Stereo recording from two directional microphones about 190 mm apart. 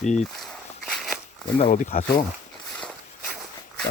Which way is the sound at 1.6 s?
50° left (ahead or behind).